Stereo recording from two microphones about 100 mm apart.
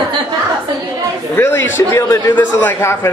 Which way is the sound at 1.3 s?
20° left (ahead or behind).